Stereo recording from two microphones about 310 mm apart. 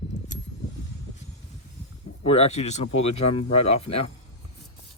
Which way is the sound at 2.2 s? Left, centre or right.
Centre.